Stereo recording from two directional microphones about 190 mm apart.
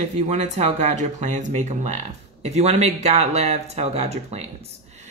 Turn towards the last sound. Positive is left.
turn(degrees=-35)  # may be behind; listen again after turning